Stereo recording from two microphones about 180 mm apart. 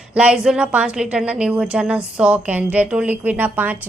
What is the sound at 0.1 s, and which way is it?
A woman's voice, 5° right (ahead or behind).